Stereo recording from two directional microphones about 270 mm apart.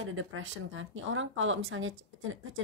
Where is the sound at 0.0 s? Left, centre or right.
Right.